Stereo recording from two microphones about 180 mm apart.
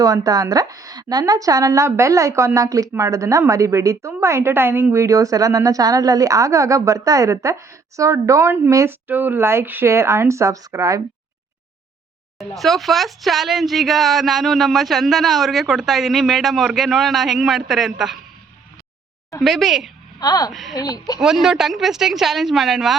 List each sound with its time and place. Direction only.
0.0 s a woman's voice: 20° right (ahead or behind)
12.4 s speech: centre (ahead or behind)
19.4 s speech: centre (ahead or behind)
20.1 s speech: 20° left (ahead or behind)
20.5 s speech: centre (ahead or behind)
20.7 s speech: 20° left (ahead or behind)
21.2 s speech: centre (ahead or behind)